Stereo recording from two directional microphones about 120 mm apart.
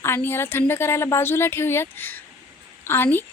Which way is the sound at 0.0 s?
20° left (ahead or behind).